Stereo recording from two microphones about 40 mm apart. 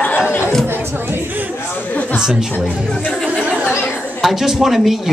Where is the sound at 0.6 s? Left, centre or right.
Right.